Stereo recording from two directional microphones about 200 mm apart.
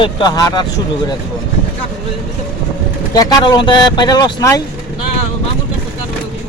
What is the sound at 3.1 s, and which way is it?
Speech, 20° left (ahead or behind).